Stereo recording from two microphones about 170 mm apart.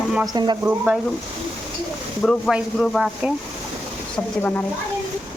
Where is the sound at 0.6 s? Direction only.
10° right (ahead or behind).